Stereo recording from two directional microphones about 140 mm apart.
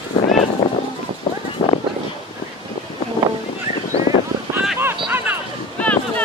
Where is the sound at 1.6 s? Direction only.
45° left (ahead or behind).